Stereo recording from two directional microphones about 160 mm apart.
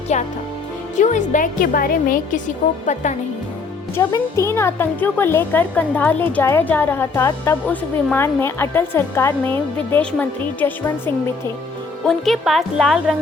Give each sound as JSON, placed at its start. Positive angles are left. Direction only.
{"t": 0.1, "sound": "a woman's voice", "side_deg": 45}
{"t": 2.8, "sound": "a woman's voice", "side_deg": 50}
{"t": 3.9, "sound": "speech", "side_deg": 15}
{"t": 12.0, "sound": "speech", "side_deg": 0}